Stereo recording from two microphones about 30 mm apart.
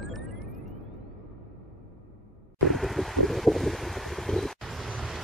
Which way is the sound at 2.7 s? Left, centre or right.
Centre.